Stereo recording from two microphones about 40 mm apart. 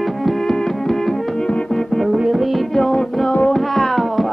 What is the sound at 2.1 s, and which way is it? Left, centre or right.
Music, centre.